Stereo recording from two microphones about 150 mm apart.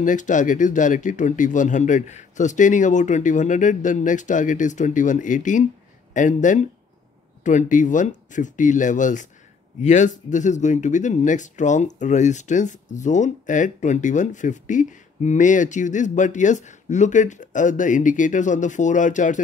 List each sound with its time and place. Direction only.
0.0 s speech: 55° left (ahead or behind)